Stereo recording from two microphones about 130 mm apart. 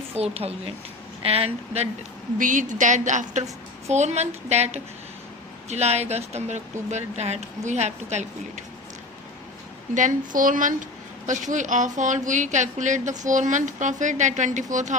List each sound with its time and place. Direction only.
0.2 s speech: 50° right (ahead or behind)
2.4 s a woman's voice: 80° right
3.8 s speech: 60° right (ahead or behind)
9.9 s a woman's voice: 80° right
11.3 s a woman's voice: 70° right (ahead or behind)